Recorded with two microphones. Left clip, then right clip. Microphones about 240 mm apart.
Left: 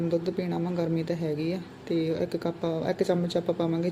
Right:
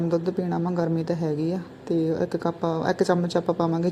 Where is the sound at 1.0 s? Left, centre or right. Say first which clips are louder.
Right 4 dB; centre.